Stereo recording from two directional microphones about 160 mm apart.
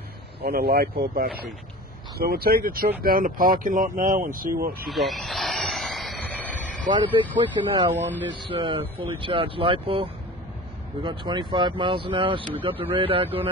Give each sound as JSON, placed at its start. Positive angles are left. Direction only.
{"t": 0.4, "sound": "speech", "side_deg": -75}
{"t": 4.8, "sound": "vehicle", "side_deg": 0}
{"t": 6.9, "sound": "speech", "side_deg": -30}